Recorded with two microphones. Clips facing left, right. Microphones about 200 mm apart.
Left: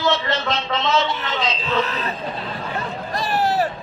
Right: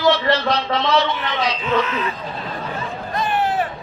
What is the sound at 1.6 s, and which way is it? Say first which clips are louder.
Speech: right 2 dB; 40° left (ahead or behind).